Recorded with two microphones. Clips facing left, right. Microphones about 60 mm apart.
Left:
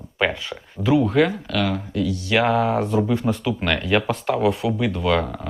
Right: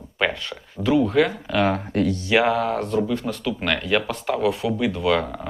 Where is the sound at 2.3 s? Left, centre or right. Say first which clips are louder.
Left 1 dB; centre.